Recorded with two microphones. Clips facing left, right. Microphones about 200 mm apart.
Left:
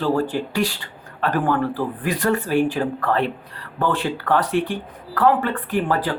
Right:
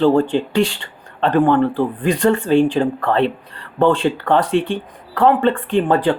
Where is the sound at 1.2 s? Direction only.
25° right (ahead or behind).